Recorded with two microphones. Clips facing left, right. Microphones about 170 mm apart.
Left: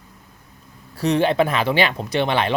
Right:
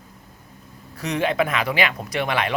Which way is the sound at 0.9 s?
30° left (ahead or behind).